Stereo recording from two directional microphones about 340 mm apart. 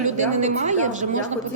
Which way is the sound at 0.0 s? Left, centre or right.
Right.